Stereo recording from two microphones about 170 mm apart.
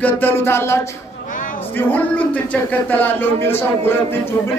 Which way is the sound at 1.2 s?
50° left (ahead or behind).